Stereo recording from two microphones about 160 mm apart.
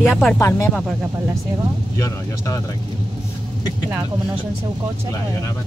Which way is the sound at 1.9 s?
20° left (ahead or behind).